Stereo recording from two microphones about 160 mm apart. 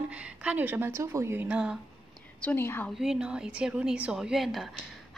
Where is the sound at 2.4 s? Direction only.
15° left (ahead or behind).